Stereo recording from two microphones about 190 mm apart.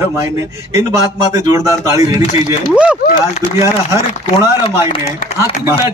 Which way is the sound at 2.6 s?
5° right (ahead or behind).